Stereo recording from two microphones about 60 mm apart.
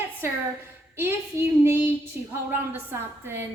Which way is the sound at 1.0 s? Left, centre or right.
Right.